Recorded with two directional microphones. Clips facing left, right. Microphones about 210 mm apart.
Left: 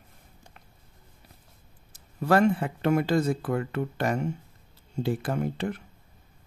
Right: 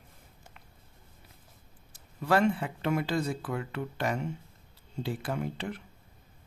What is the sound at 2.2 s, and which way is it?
Speech, 45° left (ahead or behind).